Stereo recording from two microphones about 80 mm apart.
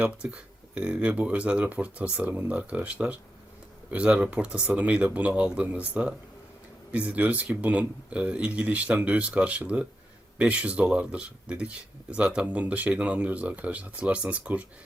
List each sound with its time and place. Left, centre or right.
0.0 s speech: centre